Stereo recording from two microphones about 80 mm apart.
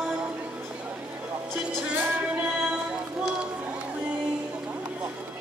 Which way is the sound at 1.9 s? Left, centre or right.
Right.